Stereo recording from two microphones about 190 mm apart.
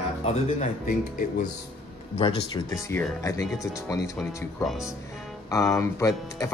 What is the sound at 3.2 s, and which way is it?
Speech, 15° left (ahead or behind).